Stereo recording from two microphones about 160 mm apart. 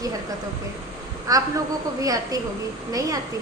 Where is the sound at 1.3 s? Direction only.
20° right (ahead or behind).